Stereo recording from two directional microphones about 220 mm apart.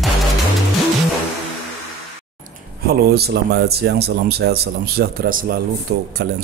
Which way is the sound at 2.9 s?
45° right (ahead or behind).